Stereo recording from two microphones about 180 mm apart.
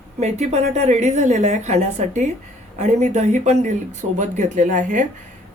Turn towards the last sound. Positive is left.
turn(degrees=-45)  # may be behind; listen again after turning